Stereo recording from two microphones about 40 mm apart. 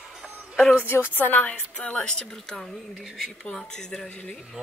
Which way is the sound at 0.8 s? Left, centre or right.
Left.